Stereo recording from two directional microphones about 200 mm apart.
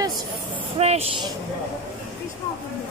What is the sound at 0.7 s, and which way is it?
Speech, 30° right (ahead or behind).